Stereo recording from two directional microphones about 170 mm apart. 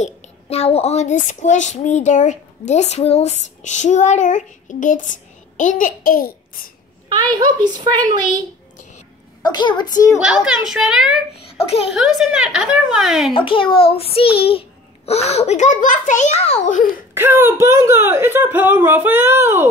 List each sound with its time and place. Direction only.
0.0 s a woman's voice: 40° left (ahead or behind); by 6.7 s 55° left (ahead or behind)
7.1 s a child's voice: 25° right (ahead or behind)
9.4 s a child's voice: 25° left (ahead or behind)
10.1 s a woman's voice: 5° right (ahead or behind)
13.3 s a child's voice: 30° left (ahead or behind); by 17.0 s 50° left (ahead or behind)
17.1 s speech: 15° right (ahead or behind)